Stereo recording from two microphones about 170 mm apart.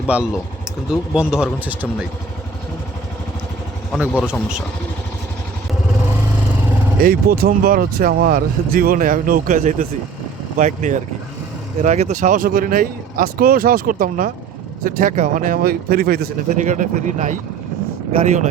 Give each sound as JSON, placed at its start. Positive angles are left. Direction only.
{"t": 0.1, "sound": "speech", "side_deg": -10}
{"t": 4.2, "sound": "speech", "side_deg": -5}
{"t": 7.0, "sound": "speech", "side_deg": -60}
{"t": 16.6, "sound": "speech", "side_deg": -45}